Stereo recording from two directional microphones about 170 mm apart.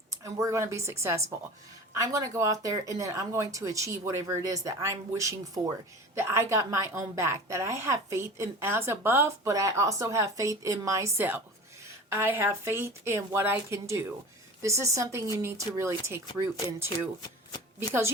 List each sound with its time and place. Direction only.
0.1 s a woman's voice: 20° right (ahead or behind)